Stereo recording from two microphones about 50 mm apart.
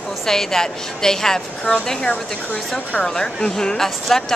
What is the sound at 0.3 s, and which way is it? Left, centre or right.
Speech, centre.